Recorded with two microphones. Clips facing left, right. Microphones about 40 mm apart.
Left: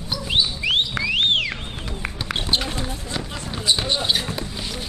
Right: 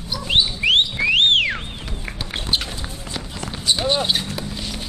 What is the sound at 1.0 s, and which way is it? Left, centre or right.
Music, right.